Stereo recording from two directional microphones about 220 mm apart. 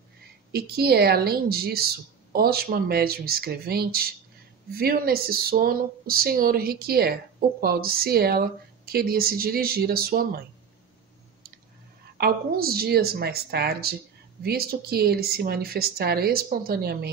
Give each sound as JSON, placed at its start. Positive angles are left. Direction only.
{"t": 0.5, "sound": "speech", "side_deg": -45}
{"t": 12.2, "sound": "speech", "side_deg": -45}